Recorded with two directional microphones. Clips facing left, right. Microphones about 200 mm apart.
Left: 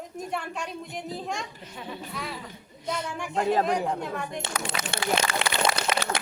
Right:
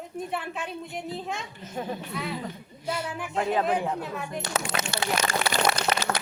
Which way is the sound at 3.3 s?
40° left (ahead or behind).